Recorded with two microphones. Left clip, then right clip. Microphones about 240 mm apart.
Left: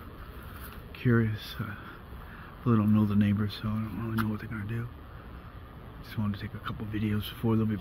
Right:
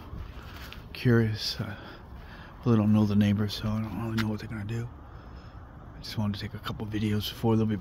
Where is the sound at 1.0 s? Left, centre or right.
Right.